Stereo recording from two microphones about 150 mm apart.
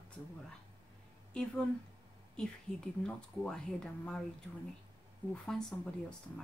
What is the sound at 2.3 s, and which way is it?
Speech, 5° left (ahead or behind).